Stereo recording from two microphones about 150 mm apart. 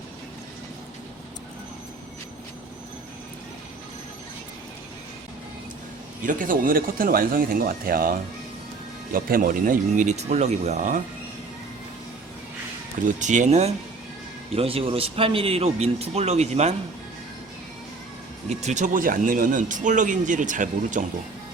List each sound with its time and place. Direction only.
6.2 s speech: 65° right (ahead or behind)
13.1 s speech: 55° right (ahead or behind)
18.4 s speech: 50° right (ahead or behind)